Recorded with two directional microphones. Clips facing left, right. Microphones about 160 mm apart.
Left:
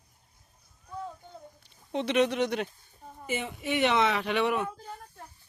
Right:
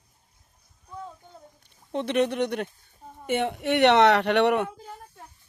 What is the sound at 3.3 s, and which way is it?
Speech, 70° right (ahead or behind).